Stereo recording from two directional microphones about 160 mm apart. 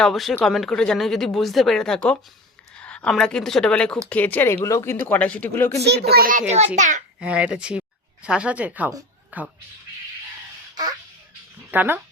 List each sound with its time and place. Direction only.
0.0 s speech: centre (ahead or behind)
5.8 s a child's voice: 85° right; by 6.4 s 65° right (ahead or behind)
6.7 s a child's voice: 50° right (ahead or behind)
7.2 s speech: 5° right (ahead or behind)
11.7 s speech: 10° right (ahead or behind)